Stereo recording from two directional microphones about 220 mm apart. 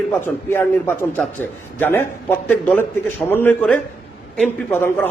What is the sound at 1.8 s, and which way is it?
A man's voice, 10° left (ahead or behind).